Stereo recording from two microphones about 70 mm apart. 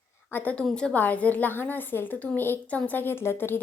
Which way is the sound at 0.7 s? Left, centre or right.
Centre.